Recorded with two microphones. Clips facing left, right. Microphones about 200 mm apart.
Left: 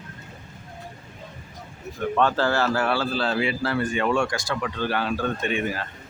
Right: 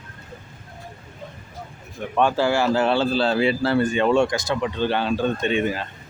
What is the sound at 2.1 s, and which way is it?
Speech, 15° right (ahead or behind).